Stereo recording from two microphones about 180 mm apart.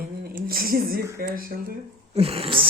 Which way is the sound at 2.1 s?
35° right (ahead or behind).